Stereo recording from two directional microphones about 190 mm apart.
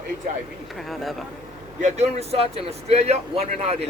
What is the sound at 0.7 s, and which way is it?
Speech, centre (ahead or behind).